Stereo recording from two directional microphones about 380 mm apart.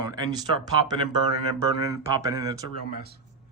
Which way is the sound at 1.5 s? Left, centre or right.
Centre.